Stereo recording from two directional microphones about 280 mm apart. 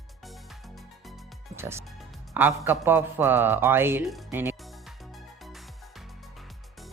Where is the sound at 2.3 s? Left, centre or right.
Centre.